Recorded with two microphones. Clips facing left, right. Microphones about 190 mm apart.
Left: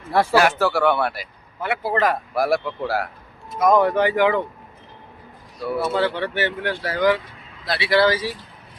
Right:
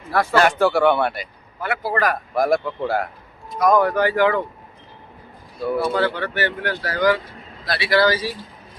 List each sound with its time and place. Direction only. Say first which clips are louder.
0.1 s speech: left 2 dB; 30° left (ahead or behind)
0.3 s speech: right 3 dB; 5° left (ahead or behind)
1.6 s speech: left 1 dB; 20° left (ahead or behind)
2.3 s speech: right 2 dB; 5° left (ahead or behind)
3.6 s speech: even; 25° left (ahead or behind)
5.6 s speech: right 2 dB; 5° left (ahead or behind)
6.1 s speech: even; 25° left (ahead or behind)